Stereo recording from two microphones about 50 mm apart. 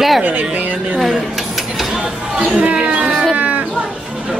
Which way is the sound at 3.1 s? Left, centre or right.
Centre.